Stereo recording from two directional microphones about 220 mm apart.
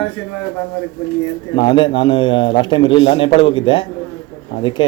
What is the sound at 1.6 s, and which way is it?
A man's voice, 20° left (ahead or behind).